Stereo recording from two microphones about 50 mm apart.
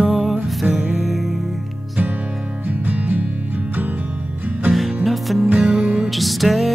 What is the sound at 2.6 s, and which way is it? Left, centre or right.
Music, right.